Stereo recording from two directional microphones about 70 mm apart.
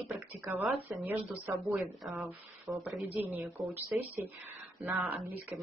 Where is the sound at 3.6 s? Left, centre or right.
Right.